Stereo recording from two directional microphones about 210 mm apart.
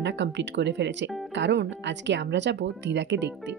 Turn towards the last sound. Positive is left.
turn(degrees=-55)  # may be behind; listen again after turning